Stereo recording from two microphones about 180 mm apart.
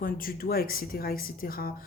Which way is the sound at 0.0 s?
55° left (ahead or behind).